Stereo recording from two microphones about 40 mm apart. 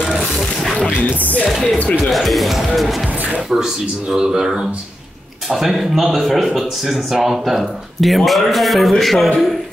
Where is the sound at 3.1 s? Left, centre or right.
Right.